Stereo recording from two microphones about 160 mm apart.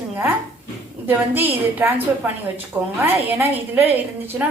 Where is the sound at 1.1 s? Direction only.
10° right (ahead or behind).